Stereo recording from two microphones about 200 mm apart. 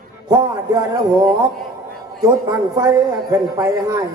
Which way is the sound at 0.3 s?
20° right (ahead or behind).